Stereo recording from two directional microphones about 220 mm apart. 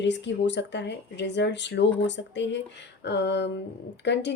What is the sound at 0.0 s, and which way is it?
Speech, 55° left (ahead or behind).